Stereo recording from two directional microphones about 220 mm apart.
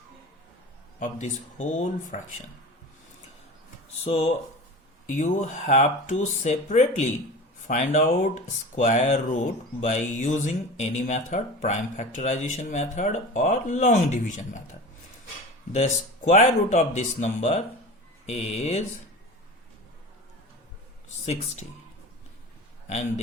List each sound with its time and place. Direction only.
0.9 s speech: 35° left (ahead or behind)
4.0 s speech: 30° left (ahead or behind)
15.7 s speech: 30° left (ahead or behind)
21.2 s speech: 30° left (ahead or behind)
22.9 s speech: 30° left (ahead or behind)